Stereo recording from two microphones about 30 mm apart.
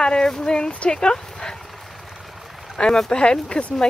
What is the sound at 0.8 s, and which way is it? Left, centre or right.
Dog, left.